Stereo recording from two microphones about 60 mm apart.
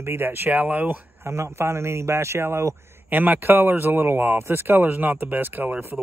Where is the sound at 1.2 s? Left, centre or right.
Right.